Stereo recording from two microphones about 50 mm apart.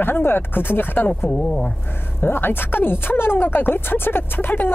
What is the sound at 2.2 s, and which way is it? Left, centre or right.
Speech, left.